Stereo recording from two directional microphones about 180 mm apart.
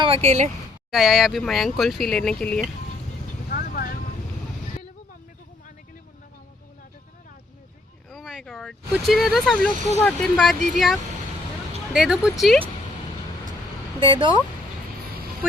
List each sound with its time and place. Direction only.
0.0 s speech: 35° right (ahead or behind)
0.9 s speech: centre (ahead or behind)
3.5 s vehicle: 55° left (ahead or behind)
8.1 s speech: centre (ahead or behind)
11.9 s speech: 5° right (ahead or behind)
14.0 s speech: 25° right (ahead or behind)